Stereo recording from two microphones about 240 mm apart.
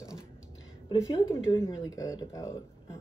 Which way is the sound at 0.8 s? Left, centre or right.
Centre.